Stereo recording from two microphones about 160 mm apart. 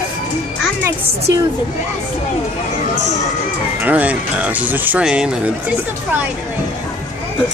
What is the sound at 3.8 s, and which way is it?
Speech, 10° right (ahead or behind).